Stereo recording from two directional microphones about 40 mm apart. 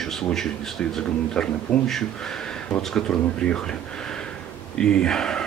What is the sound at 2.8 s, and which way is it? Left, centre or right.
Speech, centre.